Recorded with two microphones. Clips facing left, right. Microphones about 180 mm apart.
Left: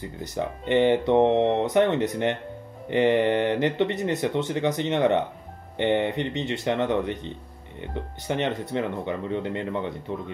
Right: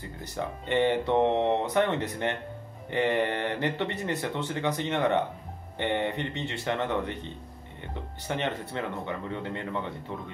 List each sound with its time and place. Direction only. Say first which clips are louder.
0.4 s speech: left 5 dB; 15° left (ahead or behind)